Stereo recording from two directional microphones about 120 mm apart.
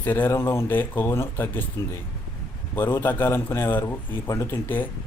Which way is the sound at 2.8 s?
15° left (ahead or behind).